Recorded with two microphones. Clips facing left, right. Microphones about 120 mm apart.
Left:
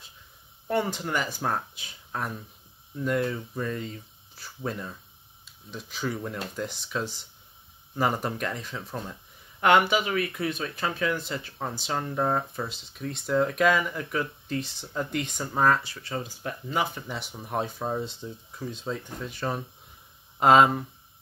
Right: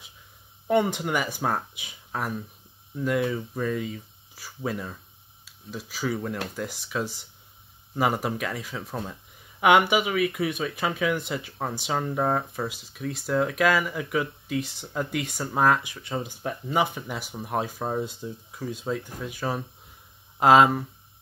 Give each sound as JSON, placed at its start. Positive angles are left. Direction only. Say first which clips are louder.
{"t": 0.7, "sound": "speech", "louder": "right 4 dB", "side_deg": -15}
{"t": 17.1, "sound": "speech", "louder": "right 2 dB", "side_deg": -5}